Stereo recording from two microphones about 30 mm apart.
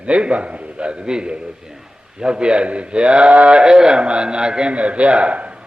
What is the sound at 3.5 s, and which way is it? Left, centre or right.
A man's voice, right.